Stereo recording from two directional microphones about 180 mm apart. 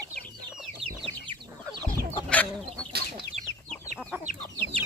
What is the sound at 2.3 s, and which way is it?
Chicken, 10° left (ahead or behind).